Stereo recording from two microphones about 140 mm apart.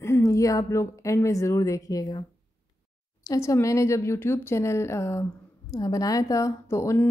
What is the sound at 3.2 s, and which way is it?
Speech, 20° left (ahead or behind).